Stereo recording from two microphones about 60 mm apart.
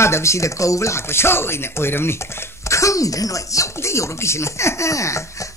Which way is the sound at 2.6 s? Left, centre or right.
Left.